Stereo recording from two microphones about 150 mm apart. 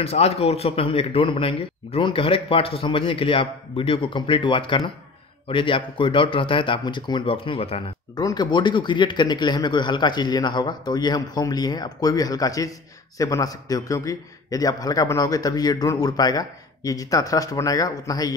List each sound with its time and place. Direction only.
0.0 s a man's voice: 45° left (ahead or behind)
8.2 s a man's voice: 25° left (ahead or behind)